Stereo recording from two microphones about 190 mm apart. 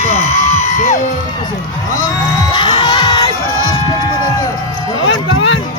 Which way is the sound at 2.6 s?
25° left (ahead or behind).